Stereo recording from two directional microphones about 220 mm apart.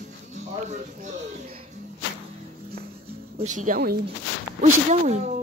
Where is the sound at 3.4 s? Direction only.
35° right (ahead or behind).